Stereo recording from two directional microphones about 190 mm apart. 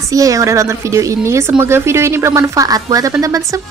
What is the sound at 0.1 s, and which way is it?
A woman's voice, 15° right (ahead or behind).